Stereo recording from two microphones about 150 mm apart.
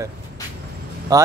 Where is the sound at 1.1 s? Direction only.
25° right (ahead or behind).